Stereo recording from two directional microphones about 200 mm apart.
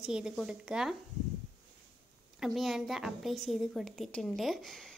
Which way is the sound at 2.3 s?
Centre (ahead or behind).